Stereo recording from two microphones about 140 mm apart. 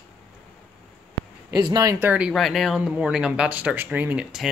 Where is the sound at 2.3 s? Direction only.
Centre (ahead or behind).